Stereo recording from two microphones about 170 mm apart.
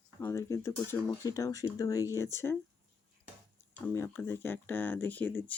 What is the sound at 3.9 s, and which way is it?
Speech, 15° left (ahead or behind).